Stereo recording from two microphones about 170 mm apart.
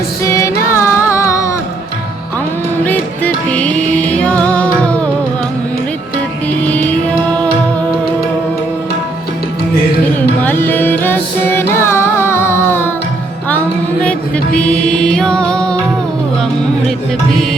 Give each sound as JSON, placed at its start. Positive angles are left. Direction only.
{"t": 0.3, "sound": "music", "side_deg": 15}
{"t": 2.8, "sound": "music", "side_deg": 10}
{"t": 10.2, "sound": "music", "side_deg": 10}
{"t": 14.0, "sound": "music", "side_deg": 5}